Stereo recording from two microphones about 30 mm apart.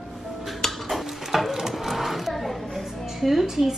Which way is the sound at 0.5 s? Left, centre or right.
Centre.